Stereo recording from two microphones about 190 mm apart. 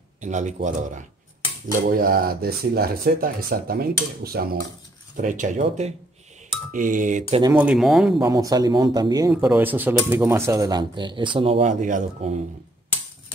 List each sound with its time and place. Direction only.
0.2 s speech: 40° right (ahead or behind)
5.1 s speech: 40° right (ahead or behind)
7.5 s speech: 5° right (ahead or behind)
8.2 s speech: 20° right (ahead or behind)
9.3 s speech: 10° right (ahead or behind); by 12.4 s 35° right (ahead or behind)